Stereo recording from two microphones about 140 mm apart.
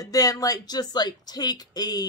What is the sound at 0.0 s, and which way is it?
Speech, 25° left (ahead or behind).